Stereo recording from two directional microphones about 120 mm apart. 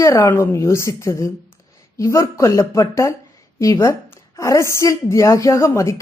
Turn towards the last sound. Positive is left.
turn(degrees=25)  # may be behind; listen again after turning